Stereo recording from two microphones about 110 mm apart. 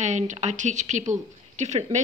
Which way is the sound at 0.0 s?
90° right.